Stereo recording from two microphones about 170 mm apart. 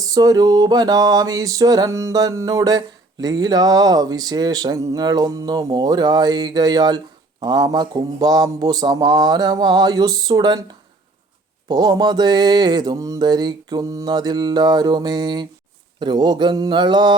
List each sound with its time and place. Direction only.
0.1 s mantra: 20° right (ahead or behind)
11.7 s mantra: 25° right (ahead or behind)